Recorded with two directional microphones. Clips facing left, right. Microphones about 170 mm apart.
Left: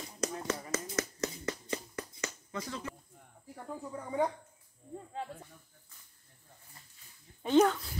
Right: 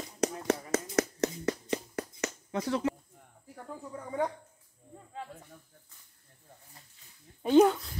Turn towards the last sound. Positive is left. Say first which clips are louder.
# right 4 dB
turn(degrees=-10)  # may be behind; listen again after turning